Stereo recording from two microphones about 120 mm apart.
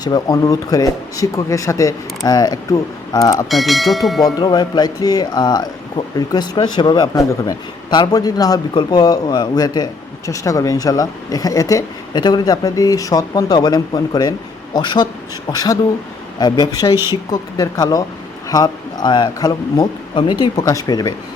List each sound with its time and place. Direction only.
0.0 s speech: 35° left (ahead or behind)
3.5 s speech: centre (ahead or behind)
4.2 s speech: 35° left (ahead or behind)
16.9 s speech: 20° right (ahead or behind)
17.3 s speech: 30° left (ahead or behind)